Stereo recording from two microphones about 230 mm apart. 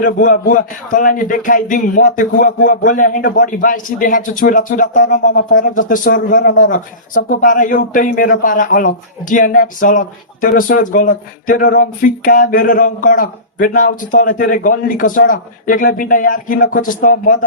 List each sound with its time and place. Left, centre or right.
0.0 s a man's voice: left